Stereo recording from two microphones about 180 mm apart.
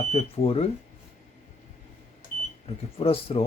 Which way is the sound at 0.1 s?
35° left (ahead or behind).